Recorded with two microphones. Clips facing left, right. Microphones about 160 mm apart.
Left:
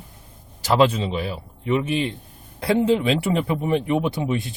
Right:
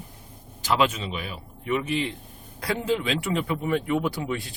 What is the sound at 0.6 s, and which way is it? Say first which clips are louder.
Speech: left 6 dB; 35° left (ahead or behind).